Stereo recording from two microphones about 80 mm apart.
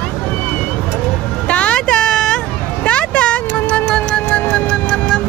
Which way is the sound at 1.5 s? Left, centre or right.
Centre.